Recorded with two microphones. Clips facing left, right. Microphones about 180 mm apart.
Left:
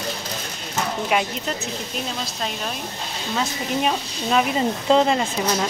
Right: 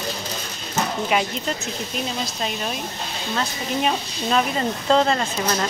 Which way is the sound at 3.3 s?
5° left (ahead or behind).